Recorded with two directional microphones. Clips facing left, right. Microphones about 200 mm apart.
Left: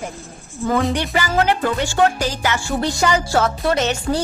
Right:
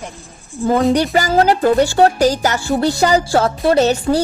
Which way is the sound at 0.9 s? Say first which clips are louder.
Right 6 dB; 40° right (ahead or behind).